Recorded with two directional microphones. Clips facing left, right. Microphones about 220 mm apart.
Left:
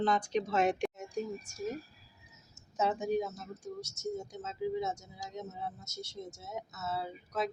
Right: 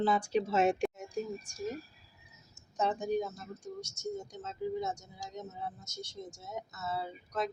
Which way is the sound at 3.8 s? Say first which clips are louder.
Left 1 dB; 25° left (ahead or behind).